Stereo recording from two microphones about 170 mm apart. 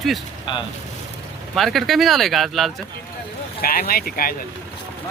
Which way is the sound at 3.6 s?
60° left (ahead or behind).